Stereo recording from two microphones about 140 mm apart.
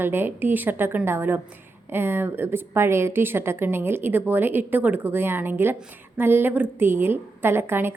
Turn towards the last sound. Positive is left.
turn(degrees=-15)  # may be behind; listen again after turning